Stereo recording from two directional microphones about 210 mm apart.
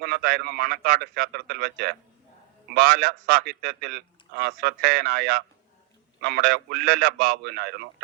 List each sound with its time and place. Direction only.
0.0 s a man's voice: 50° right (ahead or behind)